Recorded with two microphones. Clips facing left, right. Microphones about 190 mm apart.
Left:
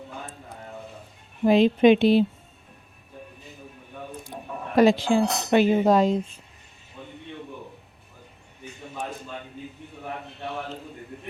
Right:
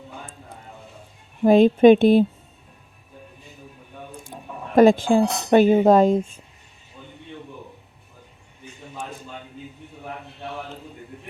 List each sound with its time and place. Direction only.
1.5 s speech: 50° right (ahead or behind)
4.3 s a sound: 15° right (ahead or behind)
4.7 s speech: 50° right (ahead or behind)